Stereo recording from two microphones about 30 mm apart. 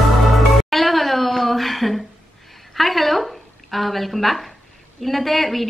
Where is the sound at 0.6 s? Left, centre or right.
Centre.